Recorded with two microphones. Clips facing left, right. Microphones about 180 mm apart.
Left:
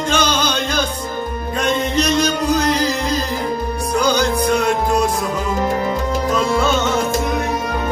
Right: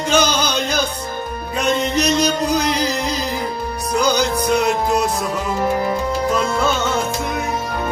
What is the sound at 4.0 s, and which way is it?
Music, 10° right (ahead or behind).